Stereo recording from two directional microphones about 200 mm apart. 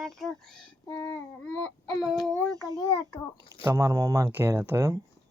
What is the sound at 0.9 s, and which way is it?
Child singing, 15° left (ahead or behind).